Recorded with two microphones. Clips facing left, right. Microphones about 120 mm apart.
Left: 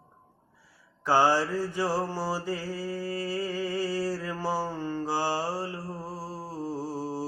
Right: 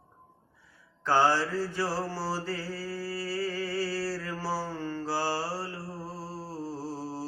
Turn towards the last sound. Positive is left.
turn(degrees=15)  # may be behind; listen again after turning